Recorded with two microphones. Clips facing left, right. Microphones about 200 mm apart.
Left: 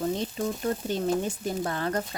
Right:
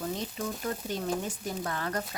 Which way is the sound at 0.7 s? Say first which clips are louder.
Left 5 dB; 30° left (ahead or behind).